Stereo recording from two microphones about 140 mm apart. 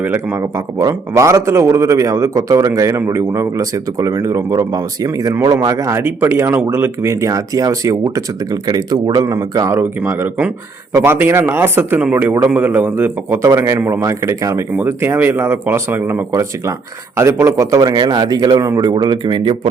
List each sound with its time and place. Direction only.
0.0 s a man's voice: 15° right (ahead or behind); by 19.5 s 35° right (ahead or behind)